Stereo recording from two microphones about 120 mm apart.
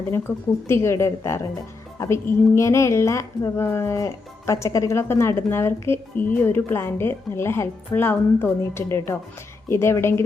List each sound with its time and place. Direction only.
0.1 s a woman's voice: 20° left (ahead or behind)